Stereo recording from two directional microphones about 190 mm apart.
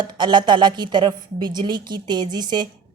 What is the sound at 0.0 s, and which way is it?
A woman's voice, 25° right (ahead or behind).